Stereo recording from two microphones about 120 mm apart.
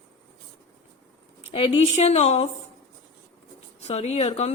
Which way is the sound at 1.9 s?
65° left (ahead or behind).